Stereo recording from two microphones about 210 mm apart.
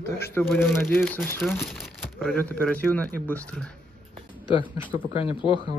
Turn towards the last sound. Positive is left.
turn(degrees=25)  # may be behind; listen again after turning